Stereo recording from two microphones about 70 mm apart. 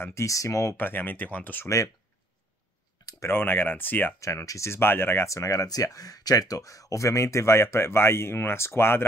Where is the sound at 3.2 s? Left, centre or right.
Left.